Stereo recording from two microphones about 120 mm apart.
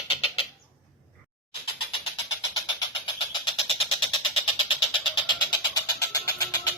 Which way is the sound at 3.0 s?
45° left (ahead or behind).